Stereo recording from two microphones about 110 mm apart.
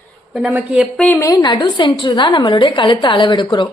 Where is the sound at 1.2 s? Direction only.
30° left (ahead or behind).